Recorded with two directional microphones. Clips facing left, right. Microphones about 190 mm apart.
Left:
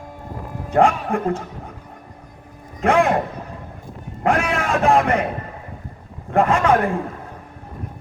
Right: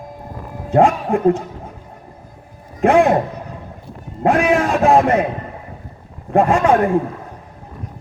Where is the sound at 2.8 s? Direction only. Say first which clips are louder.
Right 4 dB; 20° right (ahead or behind).